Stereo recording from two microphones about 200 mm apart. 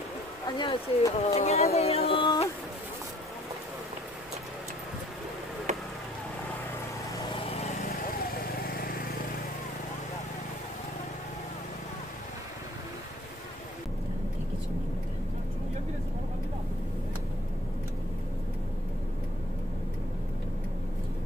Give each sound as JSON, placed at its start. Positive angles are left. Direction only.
{"t": 0.5, "sound": "speech", "side_deg": 20}
{"t": 7.2, "sound": "vehicle", "side_deg": 30}
{"t": 7.8, "sound": "lawn mower", "side_deg": 45}